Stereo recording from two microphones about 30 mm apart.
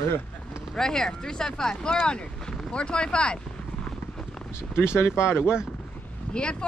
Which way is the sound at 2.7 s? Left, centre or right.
Left.